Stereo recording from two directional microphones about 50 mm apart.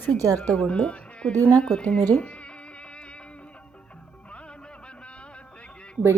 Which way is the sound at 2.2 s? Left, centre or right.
Left.